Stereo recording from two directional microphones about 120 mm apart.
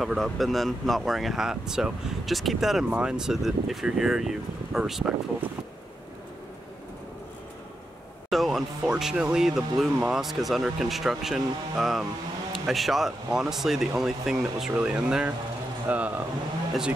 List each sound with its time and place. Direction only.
0.0 s speech: centre (ahead or behind)
8.3 s speech: centre (ahead or behind)